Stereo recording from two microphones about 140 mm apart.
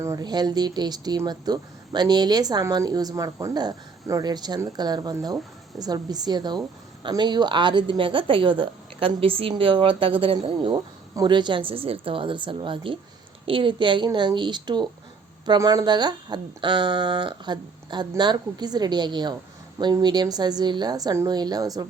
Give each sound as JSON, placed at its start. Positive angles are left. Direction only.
{"t": 0.0, "sound": "speech", "side_deg": -25}